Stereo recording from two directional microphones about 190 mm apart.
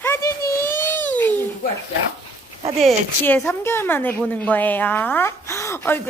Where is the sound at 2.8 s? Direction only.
10° left (ahead or behind).